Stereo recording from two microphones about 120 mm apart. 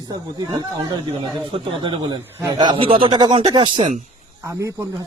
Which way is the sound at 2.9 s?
50° right (ahead or behind).